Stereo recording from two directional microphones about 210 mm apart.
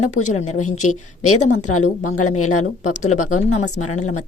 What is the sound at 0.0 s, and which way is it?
Speech, 90° left.